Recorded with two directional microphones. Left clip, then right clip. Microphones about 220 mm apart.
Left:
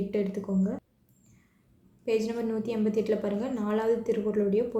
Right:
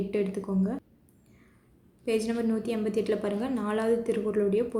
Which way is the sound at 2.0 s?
20° right (ahead or behind).